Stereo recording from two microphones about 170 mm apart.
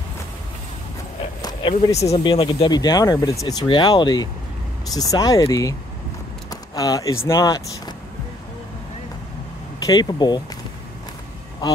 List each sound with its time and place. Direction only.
1.4 s speech: 30° left (ahead or behind)
9.8 s speech: 25° left (ahead or behind)